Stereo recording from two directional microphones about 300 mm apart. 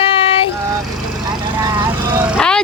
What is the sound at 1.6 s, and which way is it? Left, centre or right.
Vehicle, centre.